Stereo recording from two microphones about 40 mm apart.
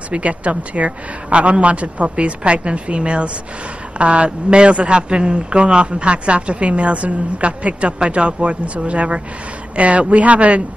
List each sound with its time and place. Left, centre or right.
0.1 s speech: right